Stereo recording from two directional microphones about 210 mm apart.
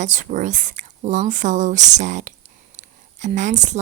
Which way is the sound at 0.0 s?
35° right (ahead or behind).